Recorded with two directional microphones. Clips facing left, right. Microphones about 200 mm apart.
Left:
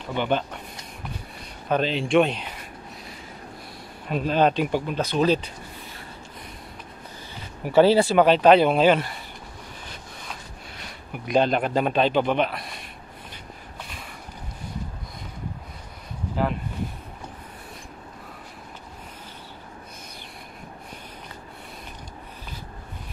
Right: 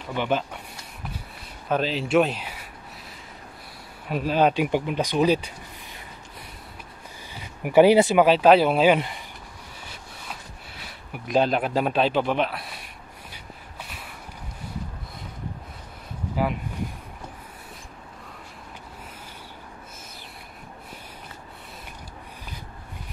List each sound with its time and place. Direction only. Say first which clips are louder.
0.1 s speech: left 1 dB; centre (ahead or behind)
1.7 s speech: left 1 dB; 5° right (ahead or behind)
4.1 s speech: even; 5° right (ahead or behind)
7.6 s speech: right 1 dB; 15° right (ahead or behind)
8.2 s speech: left 1 dB; 5° right (ahead or behind)
10.8 s a man's voice: left 1 dB; 5° right (ahead or behind)